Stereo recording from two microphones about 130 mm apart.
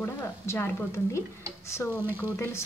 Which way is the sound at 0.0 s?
20° left (ahead or behind).